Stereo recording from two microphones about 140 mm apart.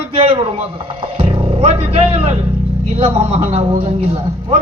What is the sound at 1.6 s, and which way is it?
Vehicle, 45° right (ahead or behind).